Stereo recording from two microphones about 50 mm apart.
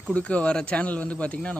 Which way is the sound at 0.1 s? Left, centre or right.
Left.